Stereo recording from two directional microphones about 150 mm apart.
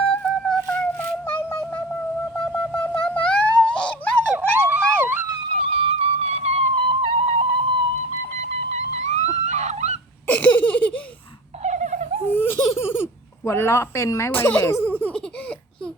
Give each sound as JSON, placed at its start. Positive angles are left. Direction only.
{"t": 0.1, "sound": "music", "side_deg": 5}
{"t": 2.4, "sound": "wind instrument", "side_deg": 10}
{"t": 3.2, "sound": "a sound", "side_deg": 5}
{"t": 4.3, "sound": "police car", "side_deg": -10}
{"t": 5.5, "sound": "music", "side_deg": -40}
{"t": 8.4, "sound": "dog", "side_deg": -50}
{"t": 10.2, "sound": "laughter", "side_deg": 10}
{"t": 11.6, "sound": "dog", "side_deg": -55}
{"t": 12.3, "sound": "laughter", "side_deg": 15}
{"t": 12.8, "sound": "a sound", "side_deg": 15}